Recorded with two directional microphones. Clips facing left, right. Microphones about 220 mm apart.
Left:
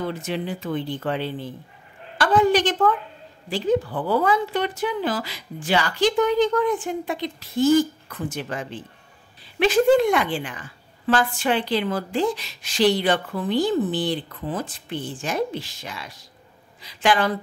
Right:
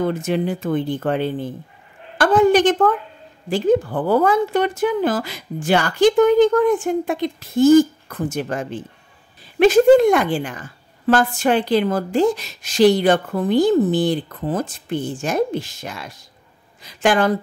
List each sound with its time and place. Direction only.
0.0 s a woman's voice: 45° right (ahead or behind)